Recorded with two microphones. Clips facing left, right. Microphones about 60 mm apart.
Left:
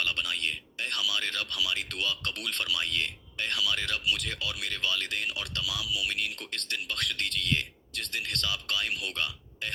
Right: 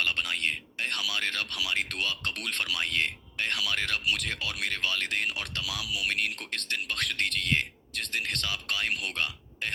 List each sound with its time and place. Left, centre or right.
0.0 s speech: right